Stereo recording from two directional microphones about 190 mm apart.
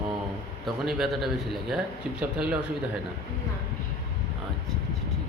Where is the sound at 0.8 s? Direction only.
Centre (ahead or behind).